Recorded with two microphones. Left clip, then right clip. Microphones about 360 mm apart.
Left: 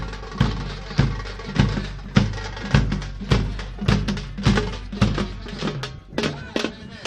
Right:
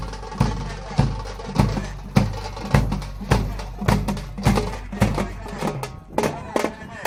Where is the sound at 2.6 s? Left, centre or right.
Centre.